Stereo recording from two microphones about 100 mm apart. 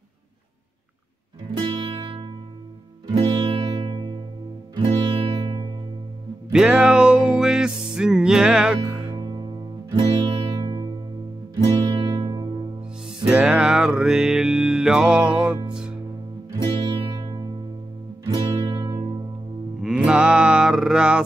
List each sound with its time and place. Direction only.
1.6 s music: 55° right (ahead or behind)
3.8 s music: 60° right (ahead or behind)
6.5 s music: 5° right (ahead or behind)
9.2 s music: 55° right (ahead or behind)
13.2 s music: 10° right (ahead or behind)
16.7 s music: 50° right (ahead or behind)
19.8 s music: 10° right (ahead or behind)